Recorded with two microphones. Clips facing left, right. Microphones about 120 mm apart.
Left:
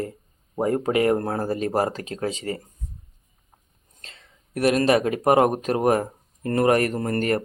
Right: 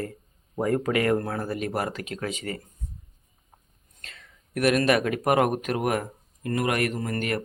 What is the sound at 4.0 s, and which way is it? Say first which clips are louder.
Speech: even; 25° left (ahead or behind).